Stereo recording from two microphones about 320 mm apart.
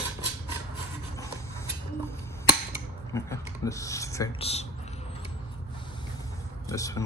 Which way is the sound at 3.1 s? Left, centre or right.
Centre.